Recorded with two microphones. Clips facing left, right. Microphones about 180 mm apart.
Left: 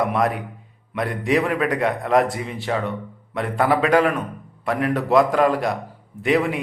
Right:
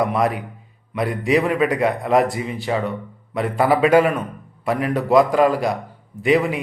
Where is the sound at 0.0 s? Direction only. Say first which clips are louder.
Right 1 dB; centre (ahead or behind).